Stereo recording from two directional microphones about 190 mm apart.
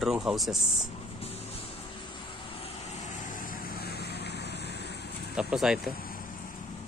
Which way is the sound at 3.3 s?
50° left (ahead or behind).